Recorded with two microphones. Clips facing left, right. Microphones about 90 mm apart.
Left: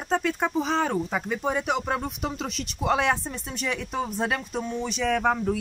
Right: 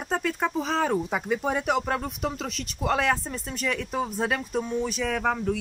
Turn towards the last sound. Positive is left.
turn(degrees=5)  # may be behind; listen again after turning